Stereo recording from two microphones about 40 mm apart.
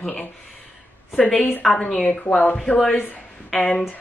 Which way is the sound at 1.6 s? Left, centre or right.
Centre.